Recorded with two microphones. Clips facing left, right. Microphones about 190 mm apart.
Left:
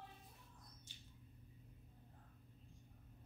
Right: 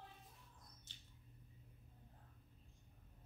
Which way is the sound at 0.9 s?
15° left (ahead or behind).